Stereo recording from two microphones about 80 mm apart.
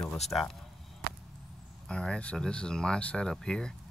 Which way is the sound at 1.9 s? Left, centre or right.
Centre.